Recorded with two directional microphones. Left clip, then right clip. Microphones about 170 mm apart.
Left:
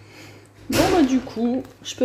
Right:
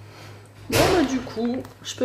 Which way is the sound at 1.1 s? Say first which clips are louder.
Left 3 dB; 10° left (ahead or behind).